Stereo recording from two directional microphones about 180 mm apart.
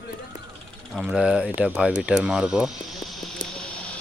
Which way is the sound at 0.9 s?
5° right (ahead or behind).